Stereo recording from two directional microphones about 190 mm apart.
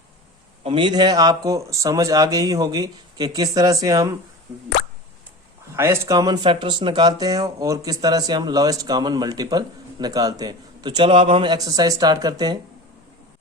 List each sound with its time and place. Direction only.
0.6 s speech: 25° right (ahead or behind)
5.7 s speech: 15° right (ahead or behind)